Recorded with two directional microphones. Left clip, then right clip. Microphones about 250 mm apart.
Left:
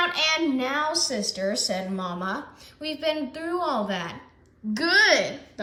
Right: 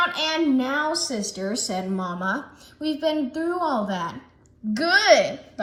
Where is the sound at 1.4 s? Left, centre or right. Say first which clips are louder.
Left 2 dB; right.